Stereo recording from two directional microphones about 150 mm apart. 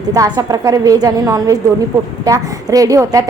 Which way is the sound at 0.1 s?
25° right (ahead or behind).